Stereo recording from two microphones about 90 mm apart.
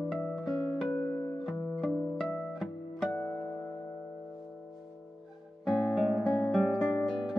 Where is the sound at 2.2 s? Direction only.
5° left (ahead or behind).